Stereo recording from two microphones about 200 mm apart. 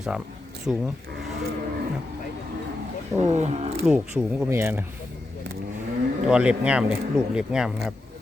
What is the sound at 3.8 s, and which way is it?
Speech, 5° right (ahead or behind).